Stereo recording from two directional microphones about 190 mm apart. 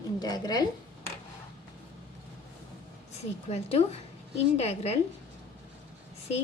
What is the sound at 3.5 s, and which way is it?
A woman's voice, 35° left (ahead or behind).